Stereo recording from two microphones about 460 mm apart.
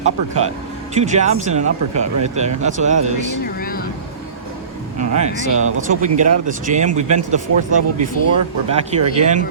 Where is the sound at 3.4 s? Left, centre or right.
Centre.